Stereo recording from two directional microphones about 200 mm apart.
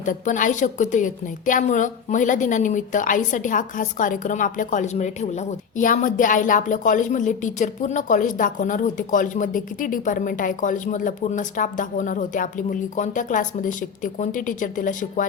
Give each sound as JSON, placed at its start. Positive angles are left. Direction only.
{"t": 0.0, "sound": "a woman's voice", "side_deg": 40}